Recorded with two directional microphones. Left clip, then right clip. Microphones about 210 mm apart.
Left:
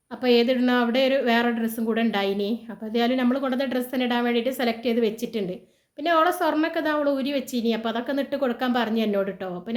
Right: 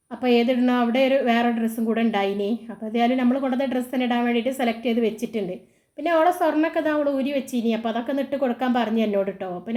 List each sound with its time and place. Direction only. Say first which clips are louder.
0.2 s speech: even; centre (ahead or behind)